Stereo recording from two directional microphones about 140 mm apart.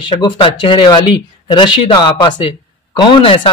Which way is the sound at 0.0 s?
35° left (ahead or behind).